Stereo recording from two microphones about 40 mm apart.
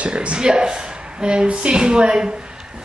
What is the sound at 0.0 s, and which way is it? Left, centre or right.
Speech, right.